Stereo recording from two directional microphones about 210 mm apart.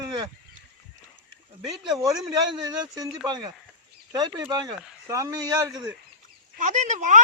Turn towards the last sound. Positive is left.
turn(degrees=-35)  # may be behind; listen again after turning